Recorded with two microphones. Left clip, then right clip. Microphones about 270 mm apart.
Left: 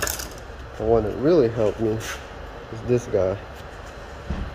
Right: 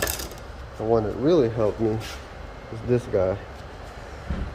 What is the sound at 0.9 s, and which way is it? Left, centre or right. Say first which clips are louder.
Speech: left 2 dB; centre.